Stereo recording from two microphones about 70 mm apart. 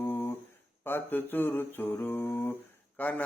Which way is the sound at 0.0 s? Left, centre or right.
Left.